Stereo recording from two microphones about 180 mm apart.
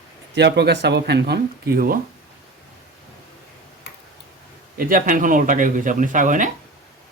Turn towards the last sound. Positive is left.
turn(degrees=-45)  # may be behind; listen again after turning